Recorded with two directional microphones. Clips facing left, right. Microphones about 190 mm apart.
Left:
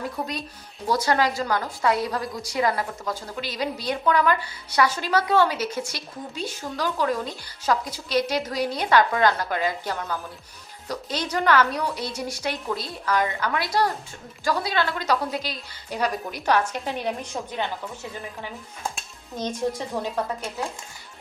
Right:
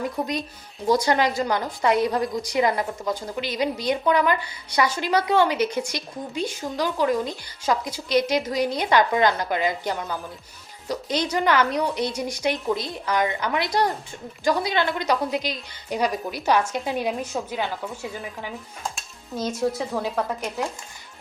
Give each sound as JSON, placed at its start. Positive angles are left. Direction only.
{"t": 0.9, "sound": "a woman's voice", "side_deg": -15}
{"t": 19.4, "sound": "a woman's voice", "side_deg": -10}